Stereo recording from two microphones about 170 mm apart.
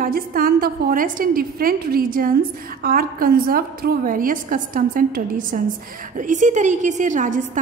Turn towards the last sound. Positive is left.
turn(degrees=-50)  # may be behind; listen again after turning